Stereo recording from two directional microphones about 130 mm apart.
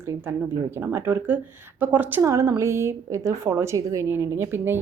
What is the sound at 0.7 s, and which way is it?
Speech, 20° right (ahead or behind).